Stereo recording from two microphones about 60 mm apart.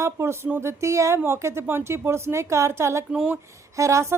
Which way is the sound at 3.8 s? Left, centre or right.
Right.